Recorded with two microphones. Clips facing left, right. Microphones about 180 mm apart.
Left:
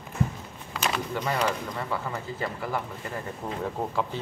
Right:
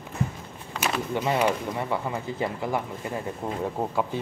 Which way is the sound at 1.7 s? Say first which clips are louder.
Right 3 dB; 20° right (ahead or behind).